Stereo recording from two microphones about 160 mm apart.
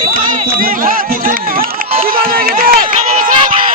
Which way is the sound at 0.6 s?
60° right (ahead or behind).